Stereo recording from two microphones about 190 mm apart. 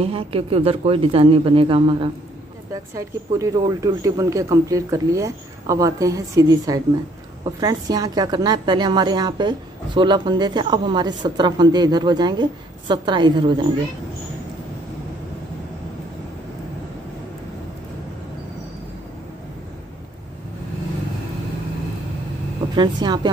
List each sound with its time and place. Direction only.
0.0 s a woman's voice: 30° right (ahead or behind)
2.7 s a woman's voice: 15° right (ahead or behind)
22.8 s a woman's voice: 20° right (ahead or behind)